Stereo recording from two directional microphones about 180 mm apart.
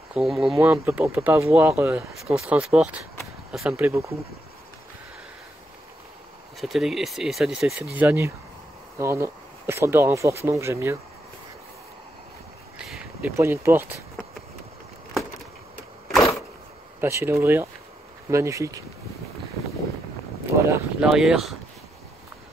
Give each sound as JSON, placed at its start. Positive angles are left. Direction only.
{"t": 0.1, "sound": "speech", "side_deg": 0}
{"t": 0.6, "sound": "speech", "side_deg": -10}
{"t": 6.6, "sound": "speech", "side_deg": 0}
{"t": 12.7, "sound": "a sound", "side_deg": -5}
{"t": 13.4, "sound": "speech", "side_deg": -15}
{"t": 17.0, "sound": "speech", "side_deg": -15}
{"t": 20.7, "sound": "speech", "side_deg": -5}